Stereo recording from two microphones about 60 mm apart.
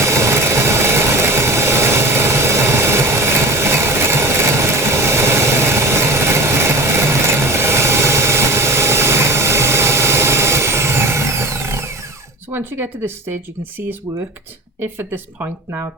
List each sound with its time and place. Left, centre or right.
0.0 s vehicle: right
12.5 s a sound: right
14.8 s speech: right